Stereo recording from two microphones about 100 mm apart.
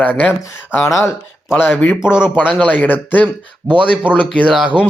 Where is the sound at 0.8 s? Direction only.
30° left (ahead or behind).